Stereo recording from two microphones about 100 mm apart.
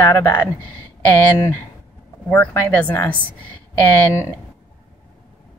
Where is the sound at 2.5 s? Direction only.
20° left (ahead or behind).